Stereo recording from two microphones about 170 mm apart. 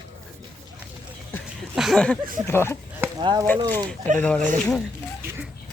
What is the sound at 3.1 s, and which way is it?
Speech, 25° right (ahead or behind).